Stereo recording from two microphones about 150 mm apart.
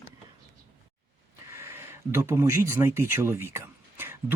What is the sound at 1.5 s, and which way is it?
Speech, 15° right (ahead or behind).